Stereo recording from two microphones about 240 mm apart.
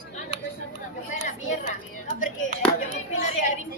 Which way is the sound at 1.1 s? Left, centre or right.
Left.